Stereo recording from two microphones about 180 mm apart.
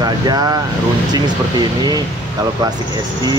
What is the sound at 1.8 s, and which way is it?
Speech, 20° right (ahead or behind).